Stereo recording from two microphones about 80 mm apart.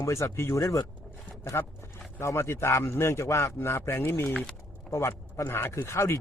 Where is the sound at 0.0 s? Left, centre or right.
Left.